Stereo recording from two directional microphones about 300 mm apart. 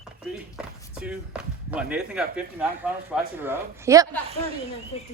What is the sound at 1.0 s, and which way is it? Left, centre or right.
A woman's voice, centre.